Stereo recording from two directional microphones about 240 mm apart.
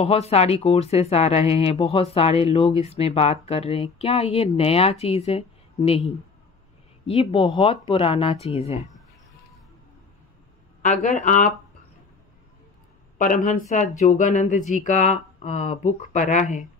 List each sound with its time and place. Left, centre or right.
0.0 s speech: left
10.8 s speech: left
13.2 s speech: left